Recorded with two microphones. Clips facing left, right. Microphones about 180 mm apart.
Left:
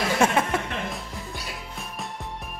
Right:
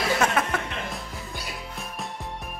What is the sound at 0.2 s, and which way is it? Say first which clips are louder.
Music: left 3 dB; 25° left (ahead or behind).